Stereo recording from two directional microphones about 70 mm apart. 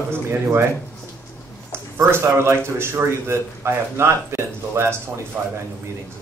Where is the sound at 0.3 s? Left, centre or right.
Right.